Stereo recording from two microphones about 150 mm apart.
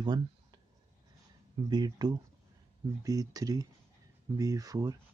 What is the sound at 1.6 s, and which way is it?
Speech, 25° right (ahead or behind).